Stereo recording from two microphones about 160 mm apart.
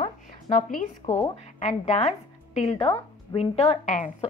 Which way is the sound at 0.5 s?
55° left (ahead or behind).